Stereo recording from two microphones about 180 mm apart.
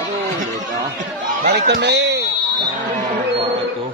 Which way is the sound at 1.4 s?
65° right (ahead or behind).